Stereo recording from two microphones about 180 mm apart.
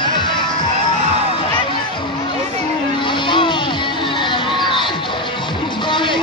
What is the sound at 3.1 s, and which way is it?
Vehicle, 25° left (ahead or behind).